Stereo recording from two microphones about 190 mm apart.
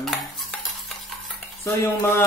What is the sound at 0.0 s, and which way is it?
Stir, centre (ahead or behind).